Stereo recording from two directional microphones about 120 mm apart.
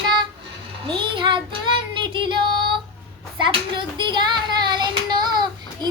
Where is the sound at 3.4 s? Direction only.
40° right (ahead or behind).